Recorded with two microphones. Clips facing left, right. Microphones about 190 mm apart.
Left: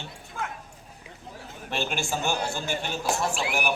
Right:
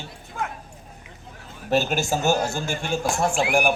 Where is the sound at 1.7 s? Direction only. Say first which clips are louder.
Right 8 dB; 40° right (ahead or behind).